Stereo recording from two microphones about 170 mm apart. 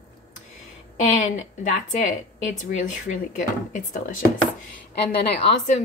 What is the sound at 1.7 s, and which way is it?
A woman's voice, 50° left (ahead or behind).